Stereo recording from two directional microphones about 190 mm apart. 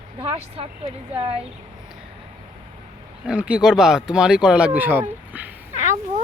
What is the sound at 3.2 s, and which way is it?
Speech, 5° right (ahead or behind).